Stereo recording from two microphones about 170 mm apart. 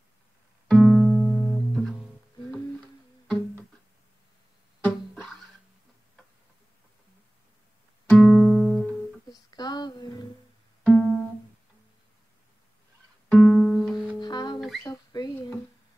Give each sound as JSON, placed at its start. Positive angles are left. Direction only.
{"t": 0.7, "sound": "music", "side_deg": 5}
{"t": 4.8, "sound": "music", "side_deg": 5}
{"t": 8.1, "sound": "music", "side_deg": 5}
{"t": 9.3, "sound": "a sound", "side_deg": 25}
{"t": 10.8, "sound": "music", "side_deg": 0}
{"t": 13.3, "sound": "music", "side_deg": 5}
{"t": 14.2, "sound": "music", "side_deg": 25}
{"t": 14.8, "sound": "rodents", "side_deg": 20}